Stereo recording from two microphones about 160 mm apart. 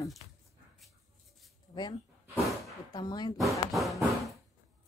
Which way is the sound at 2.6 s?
20° left (ahead or behind).